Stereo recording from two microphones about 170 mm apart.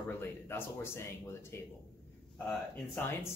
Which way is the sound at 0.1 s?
15° left (ahead or behind).